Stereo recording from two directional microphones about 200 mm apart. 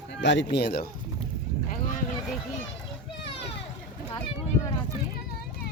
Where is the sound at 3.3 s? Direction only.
30° left (ahead or behind).